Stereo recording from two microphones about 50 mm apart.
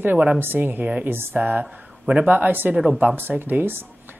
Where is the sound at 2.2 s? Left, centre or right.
Right.